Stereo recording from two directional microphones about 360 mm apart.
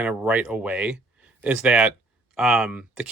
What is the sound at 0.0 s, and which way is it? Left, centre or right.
Speech, centre.